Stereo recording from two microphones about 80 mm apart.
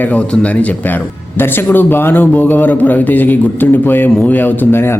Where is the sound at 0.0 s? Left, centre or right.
Centre.